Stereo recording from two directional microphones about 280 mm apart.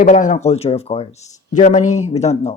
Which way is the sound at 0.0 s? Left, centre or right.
Left.